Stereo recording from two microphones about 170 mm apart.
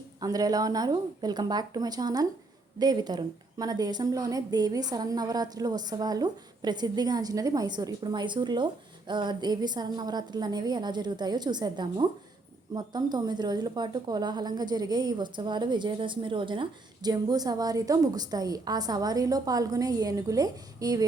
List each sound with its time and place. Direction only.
0.2 s a woman's voice: 20° right (ahead or behind)